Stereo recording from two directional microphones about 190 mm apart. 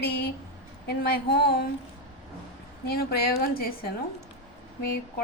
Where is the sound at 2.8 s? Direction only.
55° left (ahead or behind).